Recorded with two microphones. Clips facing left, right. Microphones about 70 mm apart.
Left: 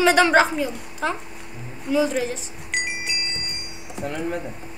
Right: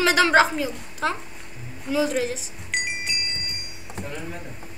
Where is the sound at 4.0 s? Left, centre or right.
Left.